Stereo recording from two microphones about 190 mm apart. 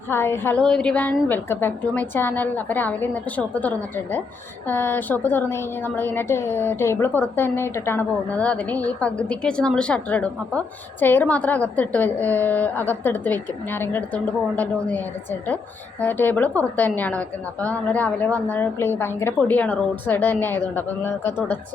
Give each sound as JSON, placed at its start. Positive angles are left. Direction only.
{"t": 0.1, "sound": "a woman's voice", "side_deg": 10}